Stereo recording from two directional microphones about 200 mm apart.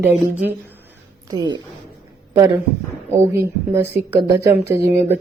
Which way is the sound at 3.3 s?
10° right (ahead or behind).